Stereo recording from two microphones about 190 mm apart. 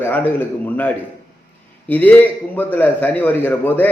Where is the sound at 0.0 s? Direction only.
10° left (ahead or behind).